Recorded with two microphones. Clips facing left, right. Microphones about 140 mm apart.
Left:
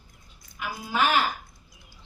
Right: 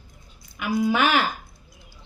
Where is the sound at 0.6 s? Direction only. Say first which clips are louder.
Right 6 dB; 70° right (ahead or behind).